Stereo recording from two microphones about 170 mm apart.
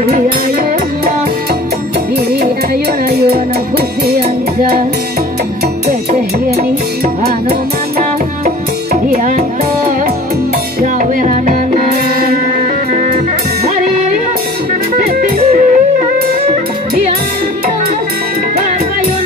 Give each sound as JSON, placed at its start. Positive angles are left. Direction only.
{"t": 3.1, "sound": "music", "side_deg": -70}
{"t": 9.1, "sound": "music", "side_deg": -50}
{"t": 10.8, "sound": "music", "side_deg": -50}
{"t": 15.0, "sound": "music", "side_deg": -55}